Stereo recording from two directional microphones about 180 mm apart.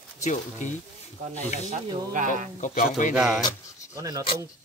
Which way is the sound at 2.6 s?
45° left (ahead or behind).